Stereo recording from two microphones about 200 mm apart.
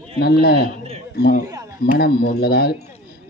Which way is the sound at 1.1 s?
45° left (ahead or behind).